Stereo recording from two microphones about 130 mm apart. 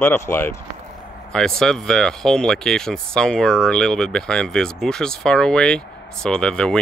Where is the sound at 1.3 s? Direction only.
5° left (ahead or behind).